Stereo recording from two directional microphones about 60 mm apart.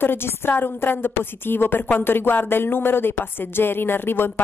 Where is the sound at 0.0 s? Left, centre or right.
Left.